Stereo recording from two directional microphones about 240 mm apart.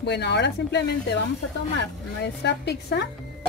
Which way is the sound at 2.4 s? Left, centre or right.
Left.